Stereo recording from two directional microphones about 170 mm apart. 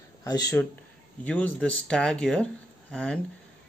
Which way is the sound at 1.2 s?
10° left (ahead or behind).